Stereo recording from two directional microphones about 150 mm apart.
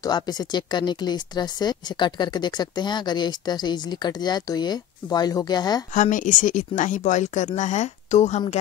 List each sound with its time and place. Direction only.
0.0 s speech: 25° left (ahead or behind)
5.9 s speech: 60° left (ahead or behind)